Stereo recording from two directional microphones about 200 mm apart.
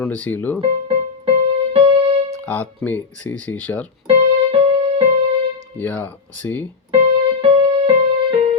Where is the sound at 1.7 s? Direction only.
25° right (ahead or behind).